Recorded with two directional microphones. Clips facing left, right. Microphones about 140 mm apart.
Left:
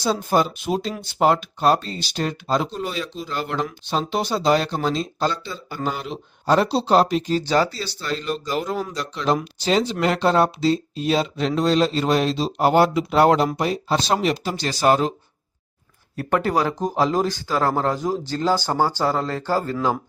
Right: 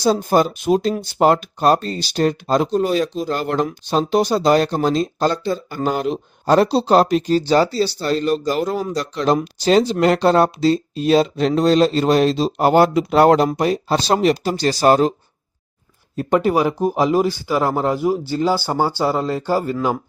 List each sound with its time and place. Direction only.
0.0 s speech: 40° right (ahead or behind)
16.1 s speech: 15° right (ahead or behind)